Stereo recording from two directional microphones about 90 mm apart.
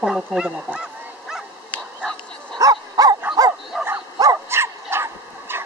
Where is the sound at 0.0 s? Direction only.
5° right (ahead or behind).